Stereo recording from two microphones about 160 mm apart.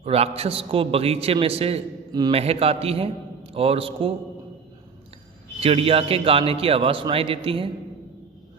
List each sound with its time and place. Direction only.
0.0 s a man's voice: 40° right (ahead or behind)
5.5 s a man's voice: 35° right (ahead or behind)